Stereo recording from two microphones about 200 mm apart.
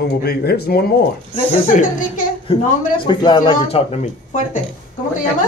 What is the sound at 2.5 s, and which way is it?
A child's voice, 30° left (ahead or behind).